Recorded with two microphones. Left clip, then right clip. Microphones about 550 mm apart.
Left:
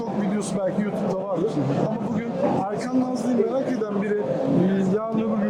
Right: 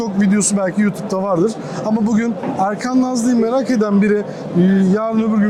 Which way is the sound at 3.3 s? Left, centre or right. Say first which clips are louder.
Right 6 dB; right.